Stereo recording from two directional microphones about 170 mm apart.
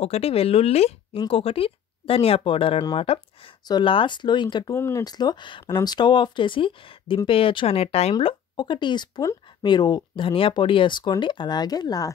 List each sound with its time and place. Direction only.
0.0 s speech: 35° left (ahead or behind)
4.7 s speech: 15° left (ahead or behind)